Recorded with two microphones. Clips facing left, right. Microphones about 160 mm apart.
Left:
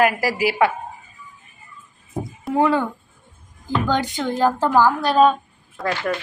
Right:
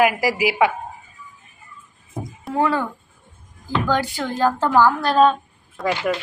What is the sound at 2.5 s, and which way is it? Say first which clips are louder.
Speech: left 2 dB; 15° left (ahead or behind).